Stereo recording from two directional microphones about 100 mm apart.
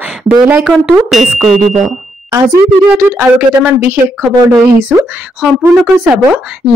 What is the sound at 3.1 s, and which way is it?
Speech, 20° right (ahead or behind).